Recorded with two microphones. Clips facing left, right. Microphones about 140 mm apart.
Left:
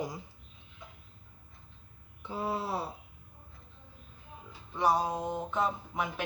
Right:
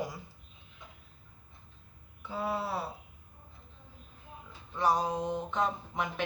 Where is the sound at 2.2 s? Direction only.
20° left (ahead or behind).